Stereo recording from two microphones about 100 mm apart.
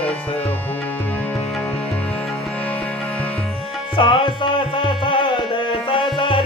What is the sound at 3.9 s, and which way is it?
Music, 60° left (ahead or behind).